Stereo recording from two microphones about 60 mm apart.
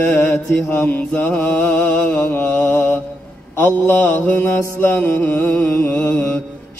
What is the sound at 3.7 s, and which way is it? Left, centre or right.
Mantra, left.